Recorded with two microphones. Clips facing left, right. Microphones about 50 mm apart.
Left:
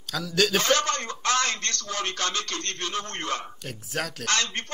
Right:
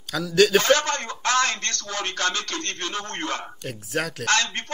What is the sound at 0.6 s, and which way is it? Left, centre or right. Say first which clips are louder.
A man's voice: right 4 dB; right.